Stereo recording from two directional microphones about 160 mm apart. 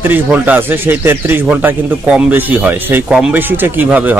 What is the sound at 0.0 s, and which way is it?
Speech, 10° right (ahead or behind).